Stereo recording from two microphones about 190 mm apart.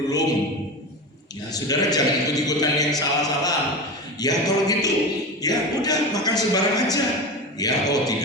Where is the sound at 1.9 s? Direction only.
20° left (ahead or behind).